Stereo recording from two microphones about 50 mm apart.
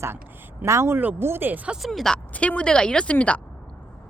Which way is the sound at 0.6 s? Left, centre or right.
Right.